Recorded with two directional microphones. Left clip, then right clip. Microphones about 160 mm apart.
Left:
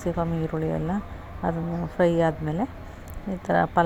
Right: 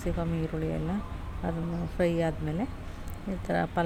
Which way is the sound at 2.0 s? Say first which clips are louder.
Left 7 dB; 15° left (ahead or behind).